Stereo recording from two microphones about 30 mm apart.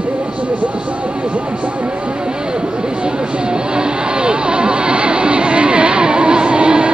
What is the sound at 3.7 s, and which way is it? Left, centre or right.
Vehicle, right.